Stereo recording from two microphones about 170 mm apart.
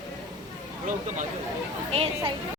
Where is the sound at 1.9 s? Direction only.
35° right (ahead or behind).